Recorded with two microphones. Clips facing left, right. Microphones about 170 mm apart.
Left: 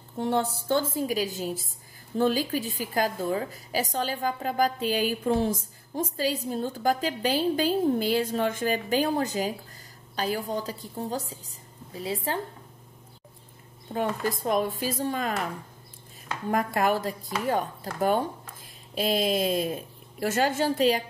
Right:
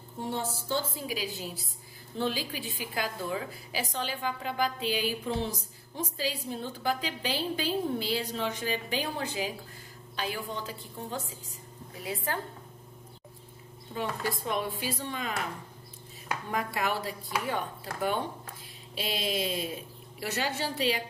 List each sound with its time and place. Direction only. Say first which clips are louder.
0.2 s a woman's voice: left 7 dB; 65° left (ahead or behind); by 12.4 s 30° left (ahead or behind)
13.9 s a woman's voice: left 5 dB; 45° left (ahead or behind)
16.4 s a woman's voice: left 7 dB; 45° left (ahead or behind)